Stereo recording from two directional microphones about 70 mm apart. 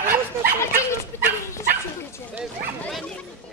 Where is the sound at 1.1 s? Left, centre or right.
Left.